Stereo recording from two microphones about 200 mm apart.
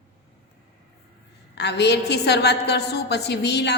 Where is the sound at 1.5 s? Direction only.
55° left (ahead or behind).